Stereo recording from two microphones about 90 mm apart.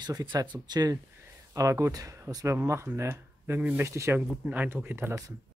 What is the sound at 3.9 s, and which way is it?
Speech, 35° right (ahead or behind).